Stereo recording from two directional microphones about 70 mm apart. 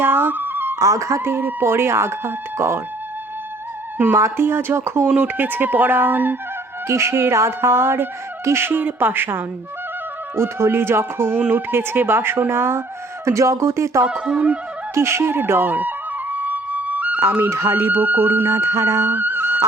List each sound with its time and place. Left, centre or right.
0.0 s music: right
0.8 s speech: right
4.1 s speech: right
5.0 s speech: centre
6.8 s speech: right
13.2 s speech: right
14.3 s music: centre
14.9 s music: right
17.5 s speech: right
19.1 s music: right